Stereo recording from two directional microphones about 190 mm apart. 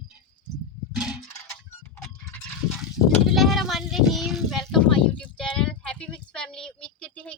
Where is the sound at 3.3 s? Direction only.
Centre (ahead or behind).